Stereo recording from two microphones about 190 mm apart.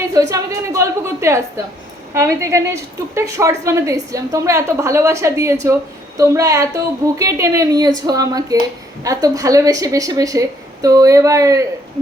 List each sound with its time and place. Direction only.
0.1 s a woman's voice: 15° right (ahead or behind)